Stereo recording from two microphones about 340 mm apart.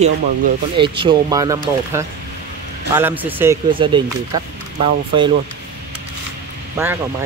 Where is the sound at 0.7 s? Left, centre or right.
Centre.